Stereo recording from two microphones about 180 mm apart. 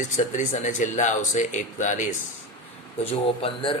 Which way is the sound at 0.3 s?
45° left (ahead or behind).